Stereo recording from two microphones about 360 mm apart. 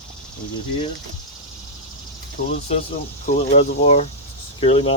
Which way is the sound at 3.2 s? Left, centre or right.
Centre.